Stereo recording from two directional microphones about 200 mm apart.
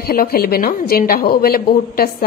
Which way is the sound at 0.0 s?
50° left (ahead or behind).